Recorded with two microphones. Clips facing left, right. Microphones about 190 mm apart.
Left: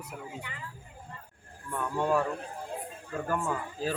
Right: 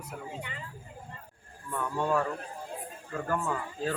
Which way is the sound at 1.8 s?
10° left (ahead or behind).